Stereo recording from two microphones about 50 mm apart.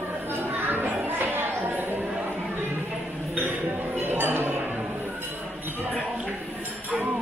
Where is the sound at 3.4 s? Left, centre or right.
Right.